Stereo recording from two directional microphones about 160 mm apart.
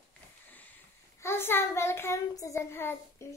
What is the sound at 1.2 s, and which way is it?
Child singing, 15° left (ahead or behind).